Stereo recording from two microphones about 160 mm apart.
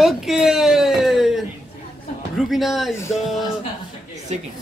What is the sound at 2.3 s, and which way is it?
Speech, centre (ahead or behind).